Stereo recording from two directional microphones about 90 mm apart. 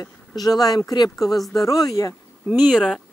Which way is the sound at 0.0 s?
45° left (ahead or behind).